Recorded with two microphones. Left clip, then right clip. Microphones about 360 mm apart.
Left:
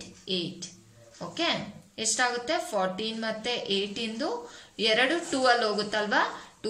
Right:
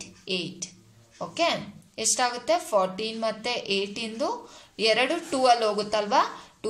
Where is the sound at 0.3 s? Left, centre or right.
Centre.